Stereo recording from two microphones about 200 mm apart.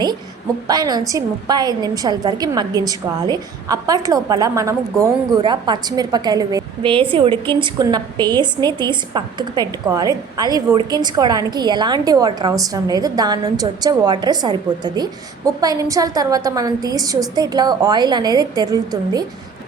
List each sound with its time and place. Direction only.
0.7 s a woman's voice: 20° right (ahead or behind)